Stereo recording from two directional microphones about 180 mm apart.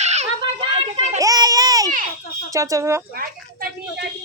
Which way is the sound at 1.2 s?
20° right (ahead or behind).